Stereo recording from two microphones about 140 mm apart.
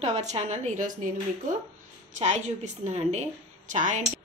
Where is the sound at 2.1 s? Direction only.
60° right (ahead or behind).